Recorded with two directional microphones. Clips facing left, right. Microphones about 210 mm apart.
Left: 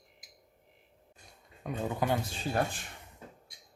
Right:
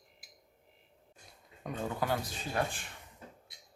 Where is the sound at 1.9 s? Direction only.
20° left (ahead or behind).